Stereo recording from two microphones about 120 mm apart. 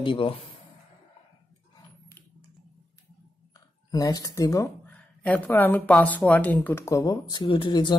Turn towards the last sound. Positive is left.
turn(degrees=45)  # may be behind; listen again after turning